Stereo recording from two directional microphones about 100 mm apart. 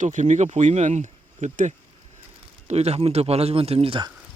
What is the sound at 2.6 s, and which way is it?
Speech, 90° right.